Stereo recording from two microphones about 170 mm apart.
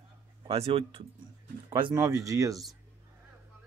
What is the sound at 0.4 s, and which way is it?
Speech, 35° right (ahead or behind).